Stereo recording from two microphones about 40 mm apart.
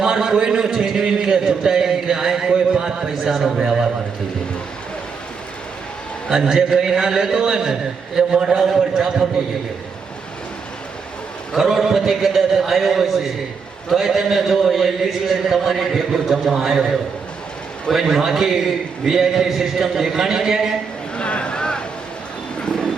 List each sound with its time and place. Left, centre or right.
0.0 s a sound: centre
3.2 s a man's voice: centre
6.3 s a man's voice: centre
11.5 s a man's voice: centre
18.2 s a man's voice: centre
21.2 s a sound: left